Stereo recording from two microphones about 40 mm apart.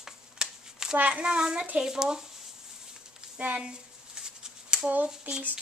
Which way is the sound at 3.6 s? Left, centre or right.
Centre.